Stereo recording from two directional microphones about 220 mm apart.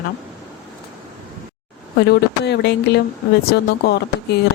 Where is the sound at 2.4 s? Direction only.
50° left (ahead or behind).